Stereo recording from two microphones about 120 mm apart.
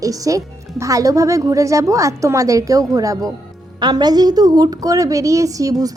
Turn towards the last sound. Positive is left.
turn(degrees=-30)  # may be behind; listen again after turning